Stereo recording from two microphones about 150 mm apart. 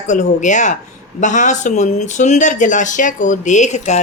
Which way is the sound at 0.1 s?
55° left (ahead or behind).